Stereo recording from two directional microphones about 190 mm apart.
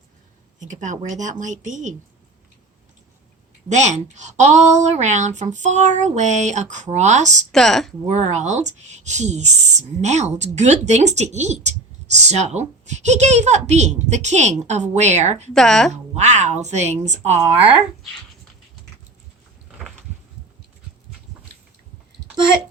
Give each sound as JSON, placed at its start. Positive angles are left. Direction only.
{"t": 0.6, "sound": "speech", "side_deg": -40}
{"t": 3.7, "sound": "speech", "side_deg": -40}
{"t": 7.5, "sound": "speech", "side_deg": 0}
{"t": 8.1, "sound": "speech", "side_deg": -35}
{"t": 15.5, "sound": "speech", "side_deg": 5}
{"t": 15.9, "sound": "speech", "side_deg": -35}